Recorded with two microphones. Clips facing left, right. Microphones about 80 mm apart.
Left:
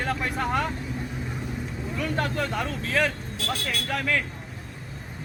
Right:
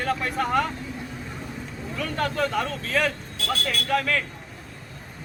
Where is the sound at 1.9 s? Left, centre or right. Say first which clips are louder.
Right 1 dB; left.